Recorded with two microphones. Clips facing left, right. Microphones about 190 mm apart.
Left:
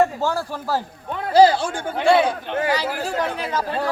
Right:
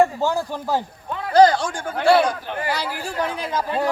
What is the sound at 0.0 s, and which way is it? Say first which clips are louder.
Speech: right 1 dB; 15° right (ahead or behind).